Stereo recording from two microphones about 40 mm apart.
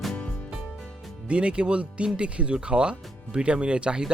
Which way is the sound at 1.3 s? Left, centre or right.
Right.